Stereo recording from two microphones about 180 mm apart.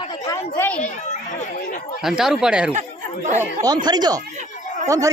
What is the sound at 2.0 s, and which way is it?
Speech, centre (ahead or behind).